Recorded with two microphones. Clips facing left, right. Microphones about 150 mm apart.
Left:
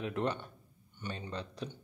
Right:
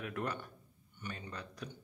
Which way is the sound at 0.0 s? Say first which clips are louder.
Left 5 dB; 25° left (ahead or behind).